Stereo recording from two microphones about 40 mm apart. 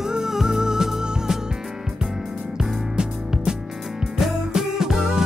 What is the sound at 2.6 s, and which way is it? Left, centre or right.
Music, centre.